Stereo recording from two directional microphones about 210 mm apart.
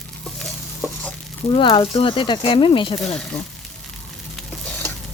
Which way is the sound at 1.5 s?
25° left (ahead or behind).